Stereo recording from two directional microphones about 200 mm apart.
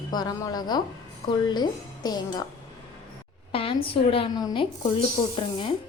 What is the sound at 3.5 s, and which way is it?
A woman's voice, 25° left (ahead or behind).